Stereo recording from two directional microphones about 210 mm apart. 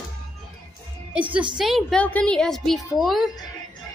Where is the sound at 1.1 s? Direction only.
5° right (ahead or behind).